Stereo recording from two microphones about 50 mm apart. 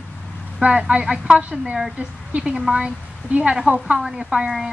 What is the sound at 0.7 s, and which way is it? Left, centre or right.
A woman's voice, right.